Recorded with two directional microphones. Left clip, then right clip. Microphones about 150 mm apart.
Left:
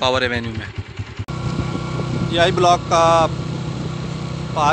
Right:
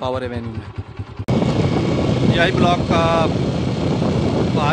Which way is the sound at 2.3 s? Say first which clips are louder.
Left 4 dB; 20° left (ahead or behind).